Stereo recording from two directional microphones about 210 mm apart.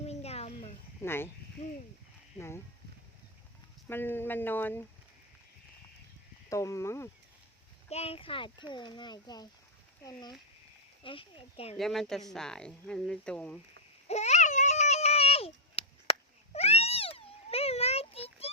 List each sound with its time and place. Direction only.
0.0 s a sound: 30° left (ahead or behind)
1.0 s speech: 10° left (ahead or behind)
3.8 s speech: 10° left (ahead or behind)
6.5 s speech: 15° left (ahead or behind)
7.9 s speech: 30° left (ahead or behind)
11.8 s speech: centre (ahead or behind)
14.1 s a sound: 30° left (ahead or behind)